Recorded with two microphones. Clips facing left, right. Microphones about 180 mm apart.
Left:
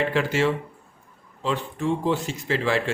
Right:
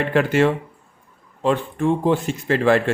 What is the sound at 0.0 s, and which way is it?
A man's voice, 55° right (ahead or behind).